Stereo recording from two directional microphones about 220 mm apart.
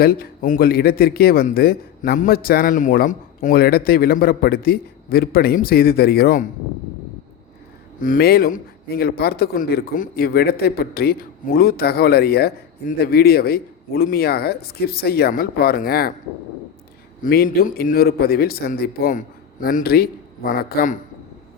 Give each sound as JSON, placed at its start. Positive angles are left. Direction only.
{"t": 0.0, "sound": "speech", "side_deg": 45}
{"t": 8.0, "sound": "speech", "side_deg": 40}
{"t": 17.2, "sound": "speech", "side_deg": 40}